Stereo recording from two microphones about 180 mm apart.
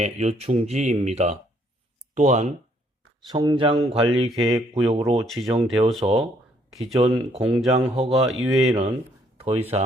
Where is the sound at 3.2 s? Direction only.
25° right (ahead or behind).